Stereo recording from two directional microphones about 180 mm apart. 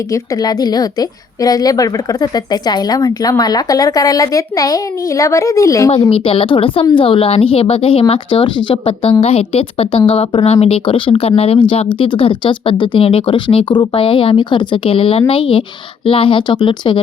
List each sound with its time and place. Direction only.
0.1 s a woman's voice: 20° left (ahead or behind)
6.0 s a woman's voice: 30° left (ahead or behind)